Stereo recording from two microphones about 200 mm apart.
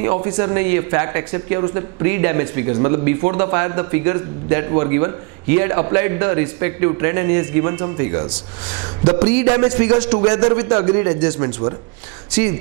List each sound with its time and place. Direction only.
0.0 s speech: 20° right (ahead or behind)
9.4 s speech: 15° right (ahead or behind)
10.0 s speech: 25° right (ahead or behind)
12.3 s speech: 10° right (ahead or behind)